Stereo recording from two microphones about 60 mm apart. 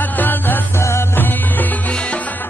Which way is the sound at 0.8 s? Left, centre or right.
Left.